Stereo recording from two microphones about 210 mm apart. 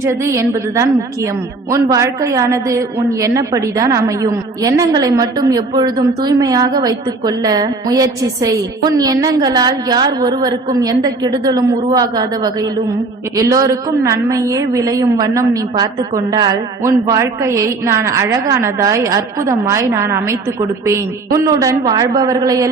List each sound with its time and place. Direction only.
0.0 s a woman's voice: 15° right (ahead or behind)